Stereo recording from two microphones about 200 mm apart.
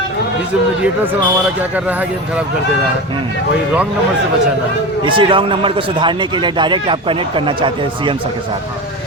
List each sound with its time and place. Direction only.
1.7 s speech: 10° right (ahead or behind)
5.0 s a man's voice: 25° right (ahead or behind)